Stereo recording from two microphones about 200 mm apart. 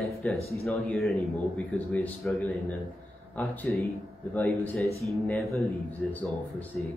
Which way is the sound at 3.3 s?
5° left (ahead or behind).